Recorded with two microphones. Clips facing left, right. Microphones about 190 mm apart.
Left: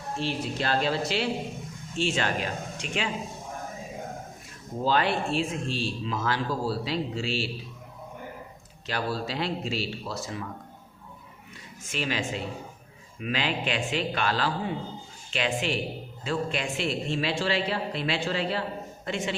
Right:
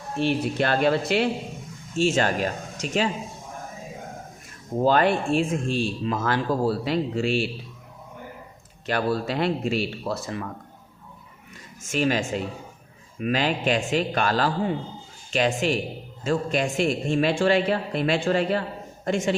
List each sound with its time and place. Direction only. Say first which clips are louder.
0.2 s speech: right 8 dB; 60° right (ahead or behind)
2.0 s speech: right 6 dB; 45° right (ahead or behind)
4.8 s speech: right 5 dB; 50° right (ahead or behind)
8.9 s speech: right 6 dB; 55° right (ahead or behind)
11.8 s speech: right 7 dB; 45° right (ahead or behind)